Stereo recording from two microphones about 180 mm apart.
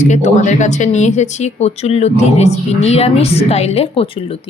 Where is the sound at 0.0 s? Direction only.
40° left (ahead or behind).